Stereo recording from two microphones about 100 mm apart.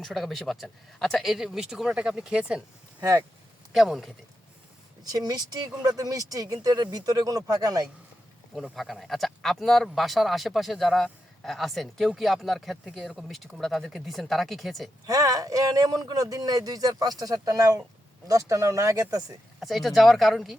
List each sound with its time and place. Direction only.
0.0 s speech: centre (ahead or behind)
3.0 s speech: 35° right (ahead or behind)
3.7 s speech: 5° right (ahead or behind)
5.1 s speech: 40° right (ahead or behind)
8.5 s speech: centre (ahead or behind)
15.0 s speech: 35° right (ahead or behind)
19.5 s speech: centre (ahead or behind)